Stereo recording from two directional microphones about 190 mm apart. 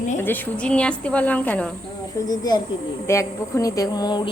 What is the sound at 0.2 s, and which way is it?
Speech, 10° left (ahead or behind).